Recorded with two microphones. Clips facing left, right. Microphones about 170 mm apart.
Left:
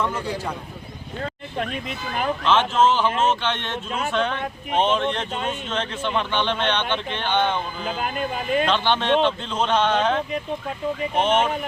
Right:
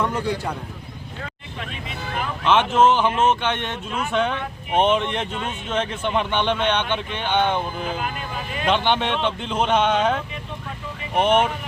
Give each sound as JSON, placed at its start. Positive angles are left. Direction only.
{"t": 1.2, "sound": "vehicle", "side_deg": 45}
{"t": 2.4, "sound": "speech", "side_deg": -15}
{"t": 8.6, "sound": "speech", "side_deg": -15}
{"t": 11.2, "sound": "speech", "side_deg": -15}